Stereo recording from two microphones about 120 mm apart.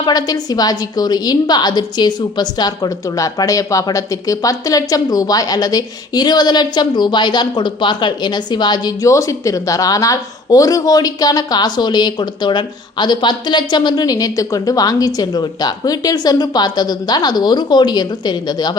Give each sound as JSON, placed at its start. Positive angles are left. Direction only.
{"t": 0.0, "sound": "a woman's voice", "side_deg": 30}